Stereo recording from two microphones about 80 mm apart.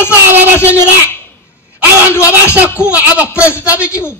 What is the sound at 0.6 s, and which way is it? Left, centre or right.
Speech, left.